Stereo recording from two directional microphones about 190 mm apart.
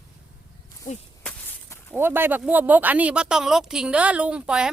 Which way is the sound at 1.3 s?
10° left (ahead or behind).